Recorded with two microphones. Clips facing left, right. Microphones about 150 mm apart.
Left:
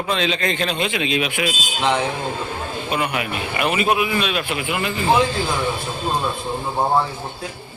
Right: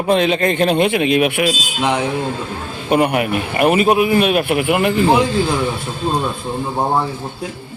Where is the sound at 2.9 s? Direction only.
50° right (ahead or behind).